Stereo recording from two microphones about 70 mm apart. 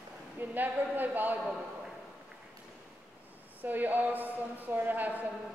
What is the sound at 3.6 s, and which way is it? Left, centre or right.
Speech, right.